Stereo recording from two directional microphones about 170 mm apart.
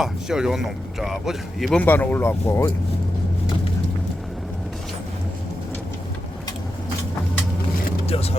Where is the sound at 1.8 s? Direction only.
10° left (ahead or behind).